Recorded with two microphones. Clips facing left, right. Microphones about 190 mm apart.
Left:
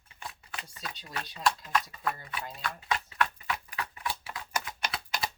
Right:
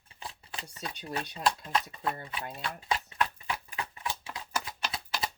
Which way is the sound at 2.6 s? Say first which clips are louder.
Even; 30° right (ahead or behind).